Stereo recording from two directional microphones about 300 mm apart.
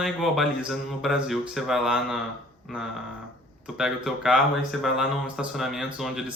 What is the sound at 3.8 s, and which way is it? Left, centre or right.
Speech, centre.